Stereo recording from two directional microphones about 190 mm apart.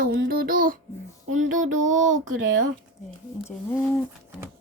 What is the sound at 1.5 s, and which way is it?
Child singing, 40° right (ahead or behind).